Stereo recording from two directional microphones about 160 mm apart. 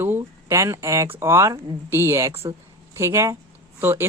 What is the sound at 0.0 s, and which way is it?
Speech, 15° right (ahead or behind).